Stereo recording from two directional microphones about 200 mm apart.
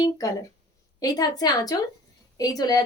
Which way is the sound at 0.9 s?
20° left (ahead or behind).